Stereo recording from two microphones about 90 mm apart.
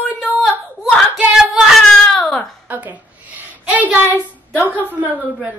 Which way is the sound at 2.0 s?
5° left (ahead or behind).